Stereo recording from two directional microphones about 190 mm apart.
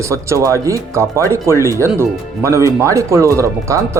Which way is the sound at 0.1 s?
15° right (ahead or behind).